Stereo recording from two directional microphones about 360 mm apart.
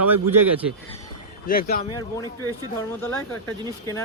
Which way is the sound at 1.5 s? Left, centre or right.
Left.